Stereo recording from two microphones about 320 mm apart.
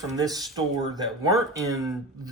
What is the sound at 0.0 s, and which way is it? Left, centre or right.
Speech, centre.